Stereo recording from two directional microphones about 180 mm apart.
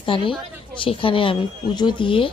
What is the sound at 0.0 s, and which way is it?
A woman's voice, 30° left (ahead or behind).